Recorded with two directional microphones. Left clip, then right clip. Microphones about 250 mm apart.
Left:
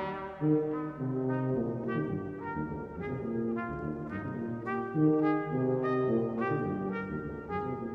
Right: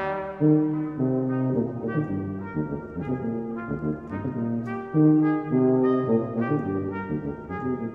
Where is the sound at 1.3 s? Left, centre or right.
Left.